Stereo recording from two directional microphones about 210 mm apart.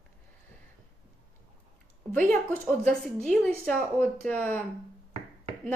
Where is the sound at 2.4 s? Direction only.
5° left (ahead or behind).